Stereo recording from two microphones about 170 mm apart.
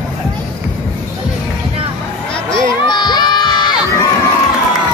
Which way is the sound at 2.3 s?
25° left (ahead or behind).